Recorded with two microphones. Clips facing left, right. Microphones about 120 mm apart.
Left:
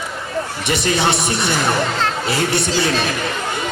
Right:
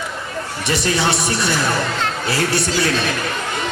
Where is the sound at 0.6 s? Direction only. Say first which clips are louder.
Even; 20° left (ahead or behind).